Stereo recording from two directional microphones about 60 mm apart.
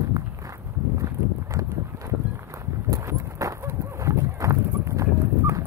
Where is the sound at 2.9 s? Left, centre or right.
Right.